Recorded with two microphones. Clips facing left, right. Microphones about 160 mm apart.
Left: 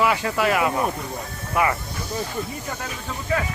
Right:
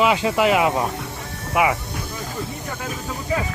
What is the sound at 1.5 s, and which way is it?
Speech, 10° right (ahead or behind).